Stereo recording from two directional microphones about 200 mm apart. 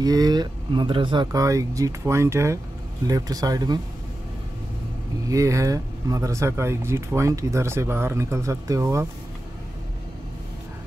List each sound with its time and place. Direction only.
0.0 s speech: 20° right (ahead or behind)
5.3 s speech: 15° right (ahead or behind)